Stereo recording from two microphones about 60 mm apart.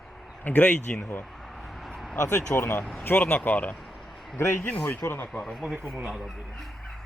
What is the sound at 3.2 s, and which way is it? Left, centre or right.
Speech, left.